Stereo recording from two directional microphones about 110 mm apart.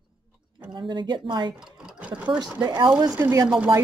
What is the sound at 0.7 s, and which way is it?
Speech, 45° right (ahead or behind).